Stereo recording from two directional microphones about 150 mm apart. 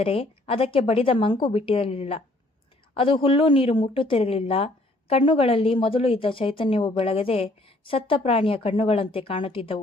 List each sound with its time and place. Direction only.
0.0 s speech: 40° left (ahead or behind)